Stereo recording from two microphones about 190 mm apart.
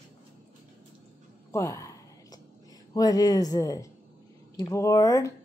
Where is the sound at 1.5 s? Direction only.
15° left (ahead or behind).